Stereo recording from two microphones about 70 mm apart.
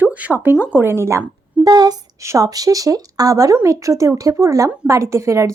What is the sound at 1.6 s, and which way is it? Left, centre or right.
Speech, right.